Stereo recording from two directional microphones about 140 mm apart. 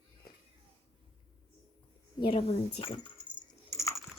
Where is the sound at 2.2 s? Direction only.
40° left (ahead or behind).